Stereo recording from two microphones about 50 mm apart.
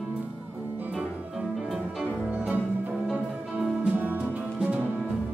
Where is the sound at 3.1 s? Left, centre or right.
Centre.